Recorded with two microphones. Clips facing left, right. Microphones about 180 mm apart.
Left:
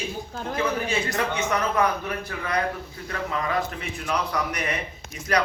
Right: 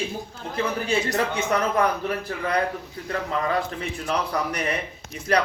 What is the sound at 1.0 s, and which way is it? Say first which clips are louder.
Speech: right 2 dB; 35° right (ahead or behind).